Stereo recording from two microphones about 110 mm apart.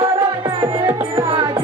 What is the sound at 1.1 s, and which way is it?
Music, 55° right (ahead or behind).